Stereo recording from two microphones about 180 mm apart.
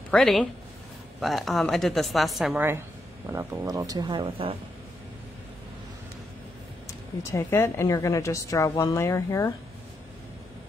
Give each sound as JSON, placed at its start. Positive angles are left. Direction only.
{"t": 0.1, "sound": "a woman's voice", "side_deg": 5}
{"t": 7.2, "sound": "a woman's voice", "side_deg": 15}